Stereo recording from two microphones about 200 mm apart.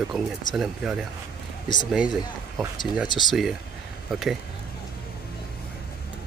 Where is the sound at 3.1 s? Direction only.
20° left (ahead or behind).